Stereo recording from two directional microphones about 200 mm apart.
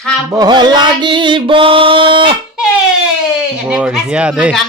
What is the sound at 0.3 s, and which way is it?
Music, 20° right (ahead or behind).